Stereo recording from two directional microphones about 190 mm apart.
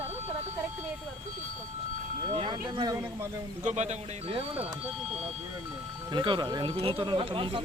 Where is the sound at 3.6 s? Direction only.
35° right (ahead or behind).